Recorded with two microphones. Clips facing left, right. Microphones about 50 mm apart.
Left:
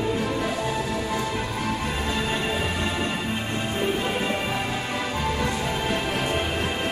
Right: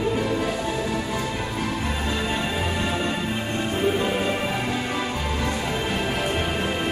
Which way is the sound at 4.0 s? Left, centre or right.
Centre.